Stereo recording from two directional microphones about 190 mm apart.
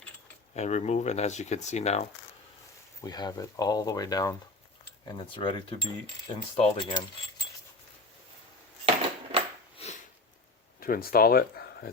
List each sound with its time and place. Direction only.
0.5 s speech: 35° left (ahead or behind)
3.0 s speech: 20° left (ahead or behind)
9.7 s sniff: 35° left (ahead or behind)
10.8 s speech: 50° left (ahead or behind)